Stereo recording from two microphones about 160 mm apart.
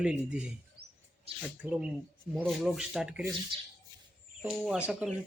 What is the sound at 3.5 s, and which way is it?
Speech, 30° right (ahead or behind).